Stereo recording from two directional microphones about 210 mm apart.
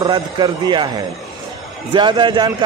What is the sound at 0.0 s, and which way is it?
Speech, 20° right (ahead or behind).